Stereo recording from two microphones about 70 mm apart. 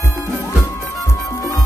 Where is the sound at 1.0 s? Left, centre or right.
Left.